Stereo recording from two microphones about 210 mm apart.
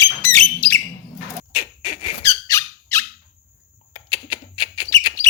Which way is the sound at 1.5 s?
25° left (ahead or behind).